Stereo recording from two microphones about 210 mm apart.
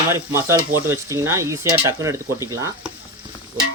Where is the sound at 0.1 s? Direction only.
15° right (ahead or behind).